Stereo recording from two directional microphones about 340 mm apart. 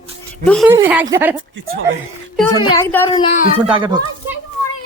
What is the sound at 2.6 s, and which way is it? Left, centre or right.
Speech, centre.